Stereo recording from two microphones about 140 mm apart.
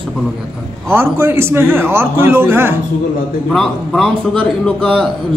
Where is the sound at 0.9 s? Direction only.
15° right (ahead or behind).